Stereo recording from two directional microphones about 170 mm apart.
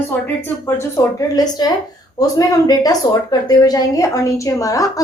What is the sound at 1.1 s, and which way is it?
A woman's voice, 25° left (ahead or behind).